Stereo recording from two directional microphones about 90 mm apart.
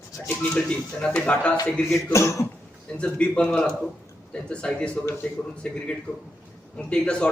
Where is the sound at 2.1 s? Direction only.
35° left (ahead or behind).